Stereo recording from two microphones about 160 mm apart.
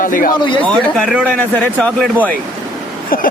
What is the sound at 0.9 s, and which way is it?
Speech, centre (ahead or behind).